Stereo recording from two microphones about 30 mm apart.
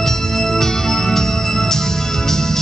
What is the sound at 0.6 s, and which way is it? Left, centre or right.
Organ, centre.